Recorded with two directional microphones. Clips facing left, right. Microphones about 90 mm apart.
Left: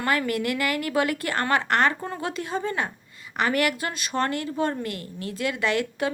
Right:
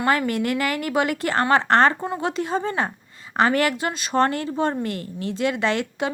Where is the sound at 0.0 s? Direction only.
25° right (ahead or behind).